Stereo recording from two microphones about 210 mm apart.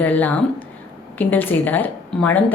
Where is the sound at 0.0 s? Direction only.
10° left (ahead or behind).